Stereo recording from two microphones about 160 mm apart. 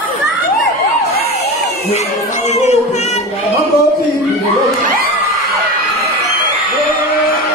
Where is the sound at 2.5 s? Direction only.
45° left (ahead or behind).